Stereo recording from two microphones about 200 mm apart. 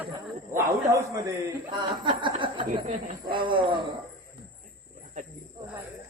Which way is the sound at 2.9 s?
40° right (ahead or behind).